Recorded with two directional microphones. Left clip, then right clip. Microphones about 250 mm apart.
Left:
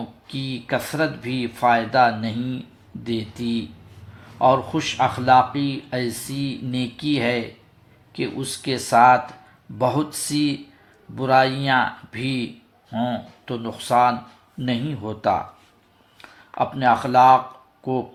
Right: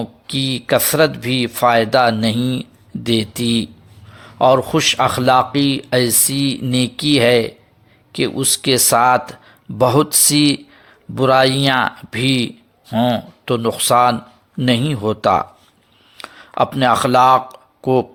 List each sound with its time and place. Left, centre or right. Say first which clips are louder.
0.3 s speech: right 9 dB; right